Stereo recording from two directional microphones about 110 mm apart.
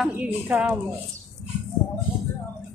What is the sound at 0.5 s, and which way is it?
Speech, 15° right (ahead or behind).